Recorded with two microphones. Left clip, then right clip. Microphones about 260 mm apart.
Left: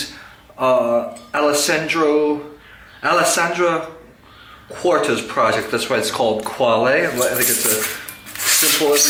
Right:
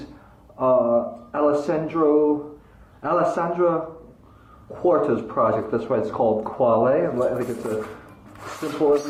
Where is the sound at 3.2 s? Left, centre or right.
Centre.